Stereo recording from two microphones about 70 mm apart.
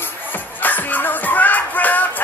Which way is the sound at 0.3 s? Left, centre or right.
Left.